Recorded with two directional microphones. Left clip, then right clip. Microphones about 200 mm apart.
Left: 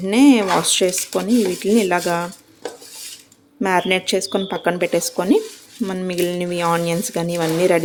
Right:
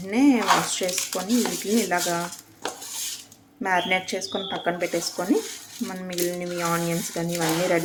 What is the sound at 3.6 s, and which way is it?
Speech, 50° left (ahead or behind).